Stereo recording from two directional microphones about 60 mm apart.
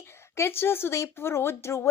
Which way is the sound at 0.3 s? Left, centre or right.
Left.